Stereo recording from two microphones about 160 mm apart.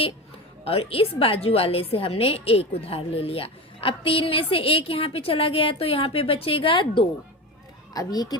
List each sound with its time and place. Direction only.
0.6 s a woman's voice: 35° left (ahead or behind)